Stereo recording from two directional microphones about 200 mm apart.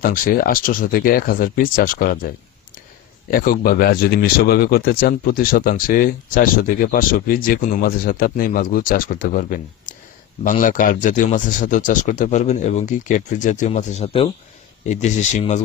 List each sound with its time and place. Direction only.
0.0 s speech: 45° left (ahead or behind)